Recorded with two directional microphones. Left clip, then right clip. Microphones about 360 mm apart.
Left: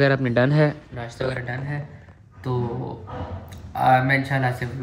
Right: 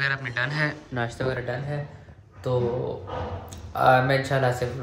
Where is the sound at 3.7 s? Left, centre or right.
Centre.